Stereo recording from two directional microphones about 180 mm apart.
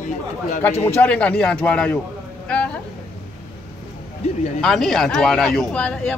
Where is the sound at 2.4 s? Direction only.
5° left (ahead or behind).